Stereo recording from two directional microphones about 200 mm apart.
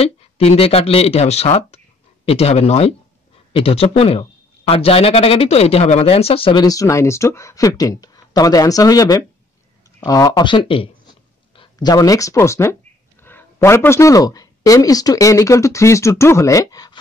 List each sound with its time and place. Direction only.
0.0 s a man's voice: 30° left (ahead or behind)